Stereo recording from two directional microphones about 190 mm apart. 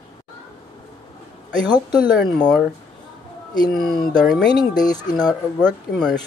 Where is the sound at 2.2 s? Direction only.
Centre (ahead or behind).